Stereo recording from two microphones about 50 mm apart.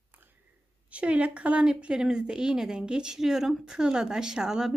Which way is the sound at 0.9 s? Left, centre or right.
Right.